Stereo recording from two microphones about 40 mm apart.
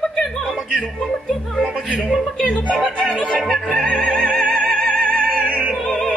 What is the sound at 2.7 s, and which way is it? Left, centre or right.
Speech, centre.